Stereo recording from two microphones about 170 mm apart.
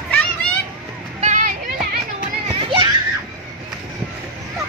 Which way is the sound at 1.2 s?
45° right (ahead or behind).